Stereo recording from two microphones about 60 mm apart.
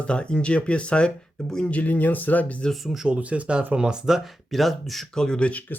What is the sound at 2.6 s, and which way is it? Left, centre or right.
Speech, centre.